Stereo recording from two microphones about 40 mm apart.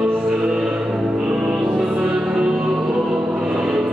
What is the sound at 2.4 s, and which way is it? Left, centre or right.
Music, right.